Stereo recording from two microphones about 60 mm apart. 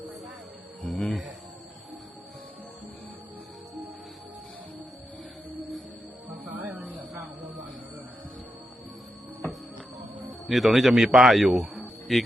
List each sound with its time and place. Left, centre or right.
0.8 s music: centre
6.6 s a sound: right
10.4 s a man's voice: centre